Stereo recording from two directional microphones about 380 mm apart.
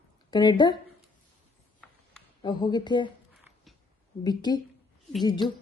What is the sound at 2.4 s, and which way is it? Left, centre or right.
Speech, centre.